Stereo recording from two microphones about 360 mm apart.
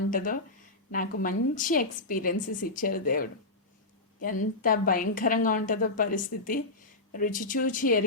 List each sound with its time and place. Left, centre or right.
0.1 s a woman's voice: left